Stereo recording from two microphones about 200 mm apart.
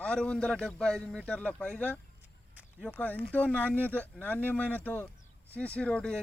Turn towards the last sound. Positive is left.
turn(degrees=5)  # may be behind; listen again after turning